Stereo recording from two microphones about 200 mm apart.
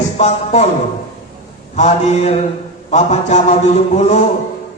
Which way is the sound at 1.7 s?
35° left (ahead or behind).